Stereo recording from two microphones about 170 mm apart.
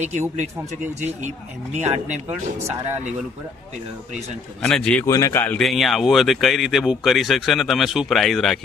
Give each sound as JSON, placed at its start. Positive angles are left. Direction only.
{"t": 0.0, "sound": "speech", "side_deg": -40}
{"t": 4.6, "sound": "speech", "side_deg": 5}
{"t": 5.0, "sound": "speech", "side_deg": 20}
{"t": 5.6, "sound": "speech", "side_deg": 0}